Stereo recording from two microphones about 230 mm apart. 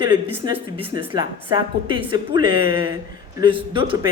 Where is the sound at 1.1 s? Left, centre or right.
Centre.